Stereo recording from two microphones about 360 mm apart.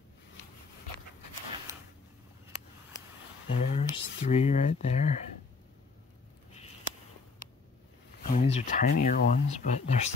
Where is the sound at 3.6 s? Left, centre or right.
Centre.